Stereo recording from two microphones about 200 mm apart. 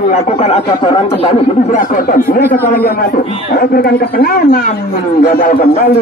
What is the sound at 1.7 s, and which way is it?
Speech, 40° left (ahead or behind).